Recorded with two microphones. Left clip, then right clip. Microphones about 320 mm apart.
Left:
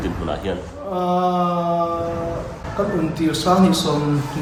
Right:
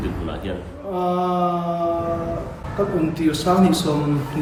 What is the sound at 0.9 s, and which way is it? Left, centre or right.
Speech, centre.